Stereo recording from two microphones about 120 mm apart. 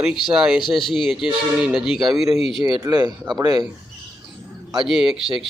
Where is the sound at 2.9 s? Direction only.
35° right (ahead or behind).